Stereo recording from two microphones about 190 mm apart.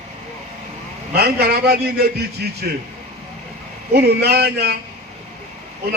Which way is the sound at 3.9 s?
55° right (ahead or behind).